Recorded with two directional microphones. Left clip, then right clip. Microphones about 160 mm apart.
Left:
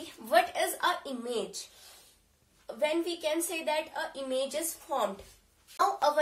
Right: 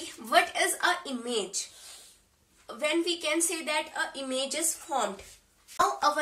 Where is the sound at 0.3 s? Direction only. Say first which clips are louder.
Right 2 dB; 15° right (ahead or behind).